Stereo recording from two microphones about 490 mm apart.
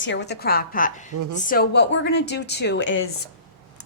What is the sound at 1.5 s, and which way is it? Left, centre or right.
A woman's voice, centre.